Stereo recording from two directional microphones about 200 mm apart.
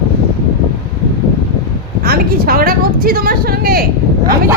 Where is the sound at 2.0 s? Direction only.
50° right (ahead or behind).